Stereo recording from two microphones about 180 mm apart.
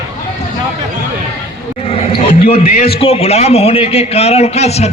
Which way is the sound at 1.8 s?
35° left (ahead or behind).